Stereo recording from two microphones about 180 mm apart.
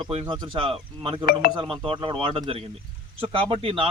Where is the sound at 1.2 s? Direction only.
55° left (ahead or behind).